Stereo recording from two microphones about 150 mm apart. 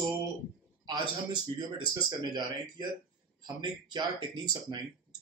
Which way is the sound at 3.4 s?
30° right (ahead or behind).